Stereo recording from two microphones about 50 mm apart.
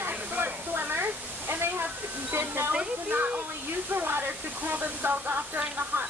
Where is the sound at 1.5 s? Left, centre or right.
Right.